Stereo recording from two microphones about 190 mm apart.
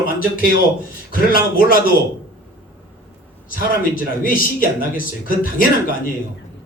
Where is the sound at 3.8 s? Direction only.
50° left (ahead or behind).